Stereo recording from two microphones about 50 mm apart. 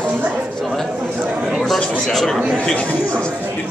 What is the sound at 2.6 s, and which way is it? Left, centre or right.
Speech, left.